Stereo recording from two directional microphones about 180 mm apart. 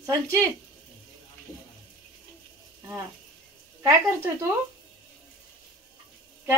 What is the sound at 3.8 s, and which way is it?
Speech, 15° right (ahead or behind).